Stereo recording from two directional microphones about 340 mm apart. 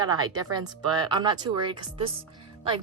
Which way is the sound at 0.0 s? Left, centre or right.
Centre.